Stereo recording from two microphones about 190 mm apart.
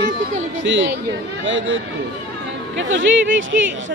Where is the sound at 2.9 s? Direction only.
80° right.